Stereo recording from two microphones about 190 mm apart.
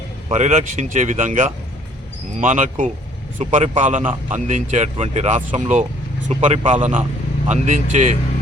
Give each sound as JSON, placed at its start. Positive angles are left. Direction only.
{"t": 0.3, "sound": "speech", "side_deg": -35}